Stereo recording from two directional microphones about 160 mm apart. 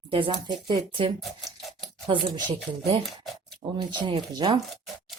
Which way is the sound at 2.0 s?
30° right (ahead or behind).